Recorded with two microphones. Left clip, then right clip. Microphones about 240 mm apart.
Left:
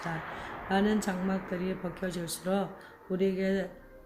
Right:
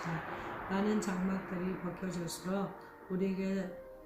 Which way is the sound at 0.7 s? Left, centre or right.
Left.